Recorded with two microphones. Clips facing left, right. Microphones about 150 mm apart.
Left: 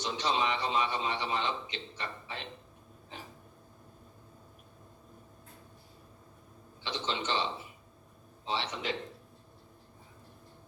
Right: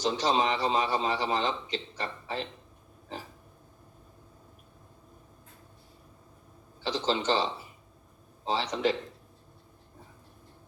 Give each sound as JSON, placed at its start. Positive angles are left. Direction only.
{"t": 0.0, "sound": "a man's voice", "side_deg": -35}
{"t": 6.8, "sound": "a man's voice", "side_deg": -35}
{"t": 8.4, "sound": "a man's voice", "side_deg": -35}